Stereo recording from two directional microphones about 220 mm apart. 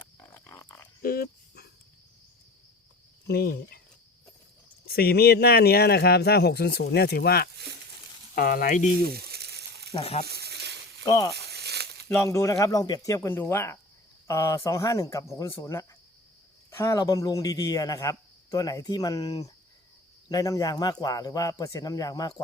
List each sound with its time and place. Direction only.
0.3 s a sound: 15° left (ahead or behind)
1.0 s dog: 45° left (ahead or behind)
3.2 s speech: 45° left (ahead or behind)
4.9 s speech: 45° left (ahead or behind)
9.0 s frying: 45° right (ahead or behind)
9.9 s speech: 25° left (ahead or behind)
10.2 s a sound: 45° right (ahead or behind)
11.0 s speech: 15° left (ahead or behind)
11.3 s a sound: 45° right (ahead or behind)
12.0 s a man's voice: 10° left (ahead or behind)